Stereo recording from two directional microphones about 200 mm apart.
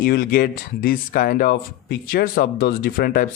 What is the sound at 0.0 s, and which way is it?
Speech, 45° left (ahead or behind).